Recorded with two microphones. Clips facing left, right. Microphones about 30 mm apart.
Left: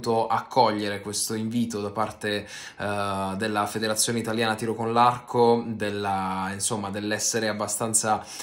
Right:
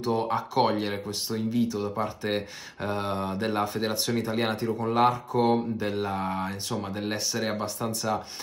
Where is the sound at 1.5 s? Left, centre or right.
Left.